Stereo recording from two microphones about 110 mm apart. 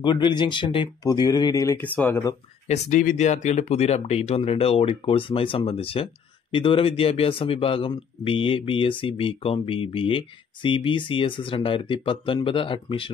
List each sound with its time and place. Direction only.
0.0 s speech: 45° left (ahead or behind)
1.0 s speech: 35° left (ahead or behind)
1.8 s speech: 15° left (ahead or behind)
2.7 s speech: 90° left; by 13.1 s 55° left (ahead or behind)